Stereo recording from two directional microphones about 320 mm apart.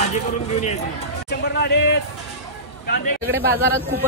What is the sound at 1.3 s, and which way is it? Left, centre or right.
Speech, left.